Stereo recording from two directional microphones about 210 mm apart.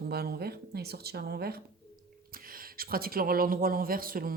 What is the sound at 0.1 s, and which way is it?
Speech, 50° right (ahead or behind).